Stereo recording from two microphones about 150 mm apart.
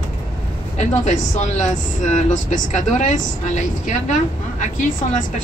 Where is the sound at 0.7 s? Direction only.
50° left (ahead or behind).